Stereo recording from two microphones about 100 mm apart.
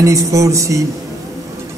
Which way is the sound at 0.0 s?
30° right (ahead or behind).